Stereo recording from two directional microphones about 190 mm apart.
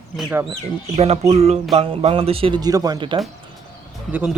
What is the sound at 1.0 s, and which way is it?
Music, 35° right (ahead or behind).